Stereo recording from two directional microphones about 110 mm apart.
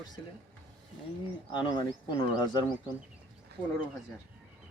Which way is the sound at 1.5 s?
45° left (ahead or behind).